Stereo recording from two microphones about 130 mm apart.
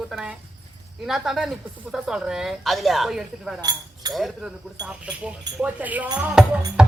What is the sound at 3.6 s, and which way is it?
Speech, 30° right (ahead or behind).